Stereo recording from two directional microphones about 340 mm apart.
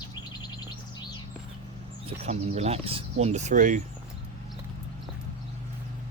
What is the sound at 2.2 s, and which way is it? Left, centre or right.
Speech, centre.